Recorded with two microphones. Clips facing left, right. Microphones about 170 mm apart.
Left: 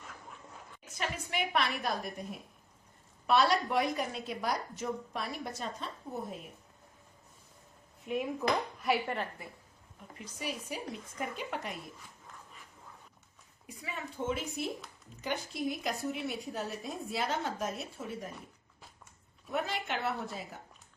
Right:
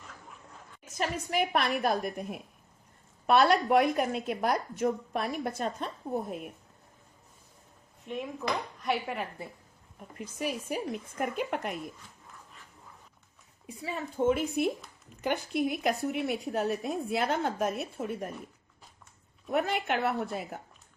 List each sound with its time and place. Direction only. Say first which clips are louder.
0.9 s a woman's voice: right 6 dB; 40° right (ahead or behind)
8.0 s dishes: left 2 dB; 5° left (ahead or behind)
10.2 s a woman's voice: right 6 dB; 50° right (ahead or behind)
13.7 s speech: right 6 dB; 30° right (ahead or behind)
14.3 s a woman's voice: right 9 dB; 55° right (ahead or behind)
19.5 s a woman's voice: right 6 dB; 55° right (ahead or behind)